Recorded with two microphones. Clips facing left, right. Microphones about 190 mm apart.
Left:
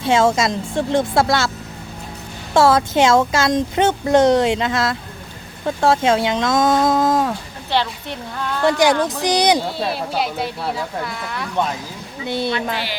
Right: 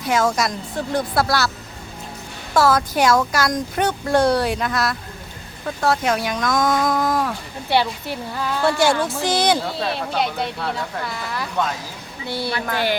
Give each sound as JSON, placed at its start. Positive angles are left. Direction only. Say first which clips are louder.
{"t": 0.0, "sound": "speech", "louder": "left 4 dB", "side_deg": 25}
{"t": 2.5, "sound": "speech", "louder": "left 3 dB", "side_deg": 25}
{"t": 7.7, "sound": "a woman's voice", "louder": "right 1 dB", "side_deg": -10}
{"t": 9.2, "sound": "speech", "louder": "left 2 dB", "side_deg": 15}
{"t": 9.6, "sound": "speech", "louder": "left 2 dB", "side_deg": 0}
{"t": 12.2, "sound": "speech", "louder": "left 4 dB", "side_deg": 20}
{"t": 12.7, "sound": "a woman's voice", "louder": "right 5 dB", "side_deg": -50}